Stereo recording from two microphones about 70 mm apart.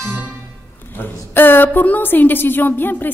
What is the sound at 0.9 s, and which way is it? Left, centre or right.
A woman's voice, left.